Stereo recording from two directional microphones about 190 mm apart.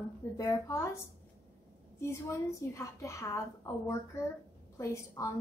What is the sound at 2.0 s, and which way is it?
A woman's voice, 15° left (ahead or behind).